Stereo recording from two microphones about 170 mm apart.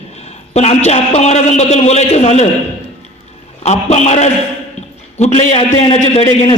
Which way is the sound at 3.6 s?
40° left (ahead or behind).